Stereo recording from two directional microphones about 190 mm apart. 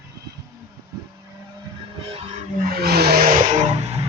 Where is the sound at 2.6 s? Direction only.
55° right (ahead or behind); by 4.1 s 35° right (ahead or behind).